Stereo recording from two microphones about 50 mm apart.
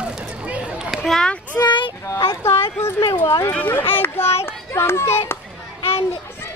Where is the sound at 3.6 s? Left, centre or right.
Left.